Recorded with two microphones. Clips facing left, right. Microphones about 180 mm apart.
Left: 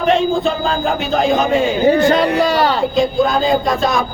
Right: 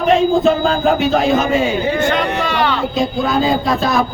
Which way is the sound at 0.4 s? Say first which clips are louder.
Right 4 dB; centre (ahead or behind).